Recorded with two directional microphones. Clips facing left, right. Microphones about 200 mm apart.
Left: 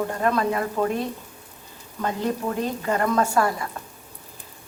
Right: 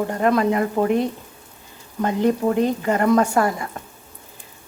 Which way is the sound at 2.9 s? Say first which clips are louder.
Right 3 dB; 20° right (ahead or behind).